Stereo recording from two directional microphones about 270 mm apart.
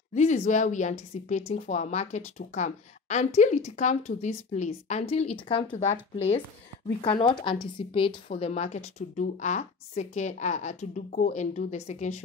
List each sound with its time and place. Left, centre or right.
0.1 s speech: left
7.0 s speech: centre